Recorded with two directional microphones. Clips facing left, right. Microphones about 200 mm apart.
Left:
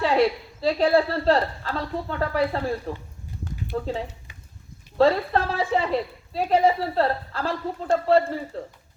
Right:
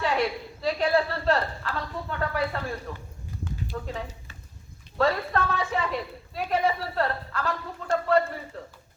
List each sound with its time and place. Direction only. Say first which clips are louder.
0.0 s a woman's voice: left 6 dB; 30° left (ahead or behind)
4.9 s a woman's voice: left 5 dB; 30° left (ahead or behind)